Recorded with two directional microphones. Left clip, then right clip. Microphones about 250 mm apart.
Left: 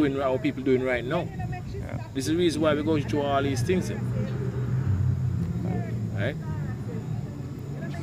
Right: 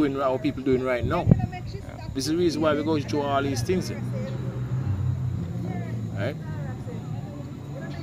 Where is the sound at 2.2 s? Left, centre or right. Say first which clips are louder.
Right 1 dB; centre.